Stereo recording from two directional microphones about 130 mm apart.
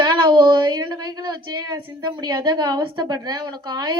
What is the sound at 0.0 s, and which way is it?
A woman's voice, 35° right (ahead or behind).